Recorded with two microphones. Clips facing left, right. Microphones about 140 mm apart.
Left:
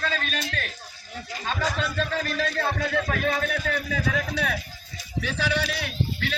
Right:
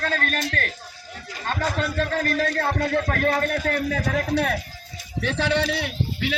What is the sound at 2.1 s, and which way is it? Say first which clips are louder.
A man's voice: right 4 dB; 50° right (ahead or behind).